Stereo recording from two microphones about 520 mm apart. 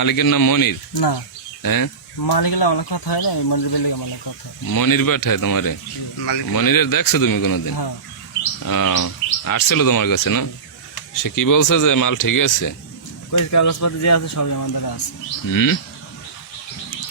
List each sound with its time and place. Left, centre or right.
0.0 s speech: left